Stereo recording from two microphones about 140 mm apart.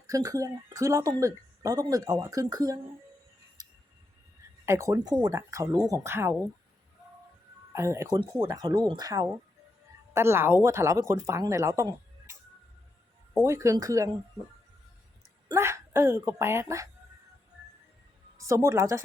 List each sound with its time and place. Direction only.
0.1 s speech: 25° right (ahead or behind)
3.6 s music: 30° right (ahead or behind)
4.6 s speech: 20° right (ahead or behind)
7.7 s speech: 20° right (ahead or behind)
8.1 s speech: 35° right (ahead or behind)
13.4 s speech: 20° right (ahead or behind)
15.4 s speech: 20° right (ahead or behind)
18.4 s speech: 20° right (ahead or behind)